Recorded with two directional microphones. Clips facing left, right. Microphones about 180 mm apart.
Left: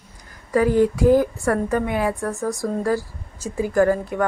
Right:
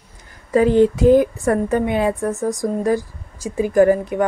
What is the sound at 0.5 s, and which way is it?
A woman's voice, 25° right (ahead or behind).